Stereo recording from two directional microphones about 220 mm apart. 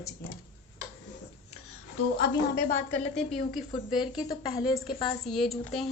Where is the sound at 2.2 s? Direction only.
45° left (ahead or behind).